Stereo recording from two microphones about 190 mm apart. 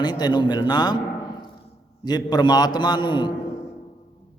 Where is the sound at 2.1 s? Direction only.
20° left (ahead or behind).